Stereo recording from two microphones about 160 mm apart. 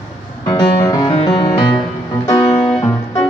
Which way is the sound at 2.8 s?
20° left (ahead or behind).